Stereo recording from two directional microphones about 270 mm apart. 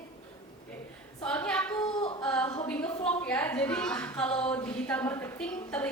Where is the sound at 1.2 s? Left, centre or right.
Centre.